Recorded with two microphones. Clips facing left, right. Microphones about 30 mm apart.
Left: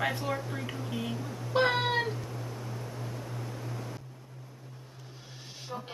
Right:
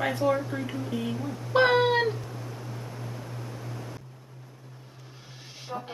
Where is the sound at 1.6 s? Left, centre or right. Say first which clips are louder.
Right 6 dB; right.